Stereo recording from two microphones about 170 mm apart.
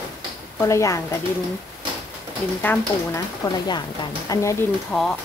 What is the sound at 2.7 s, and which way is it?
Speech, 10° left (ahead or behind).